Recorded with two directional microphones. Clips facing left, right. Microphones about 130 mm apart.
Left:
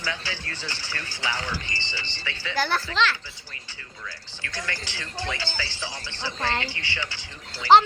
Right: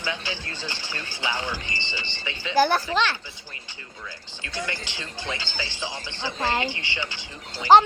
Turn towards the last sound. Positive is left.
turn(degrees=-15)  # may be behind; listen again after turning